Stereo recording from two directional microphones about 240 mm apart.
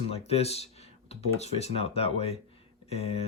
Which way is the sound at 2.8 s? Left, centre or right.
Left.